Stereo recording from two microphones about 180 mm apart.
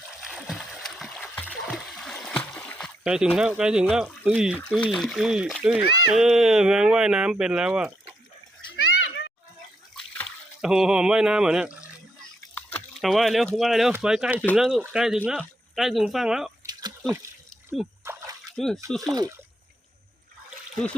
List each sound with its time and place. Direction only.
0.2 s splash: centre (ahead or behind)
3.0 s speech: 5° right (ahead or behind)
8.7 s a sound: 85° left
9.9 s splash: centre (ahead or behind)
12.7 s speech: centre (ahead or behind)
18.0 s splash: 15° right (ahead or behind)
18.5 s speech: centre (ahead or behind)
19.0 s speech: 20° right (ahead or behind)